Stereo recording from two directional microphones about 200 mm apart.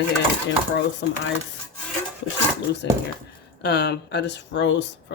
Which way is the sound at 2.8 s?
60° left (ahead or behind).